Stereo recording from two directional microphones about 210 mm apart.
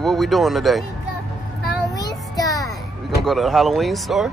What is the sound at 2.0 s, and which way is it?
Child singing, 15° left (ahead or behind).